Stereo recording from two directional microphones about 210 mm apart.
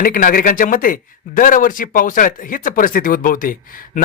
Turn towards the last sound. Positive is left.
turn(degrees=40)  # may be behind; listen again after turning